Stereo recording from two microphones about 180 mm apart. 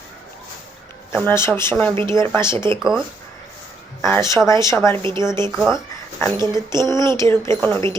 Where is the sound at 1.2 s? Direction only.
10° left (ahead or behind).